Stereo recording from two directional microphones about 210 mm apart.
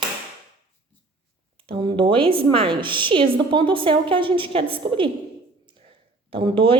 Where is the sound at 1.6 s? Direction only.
25° right (ahead or behind).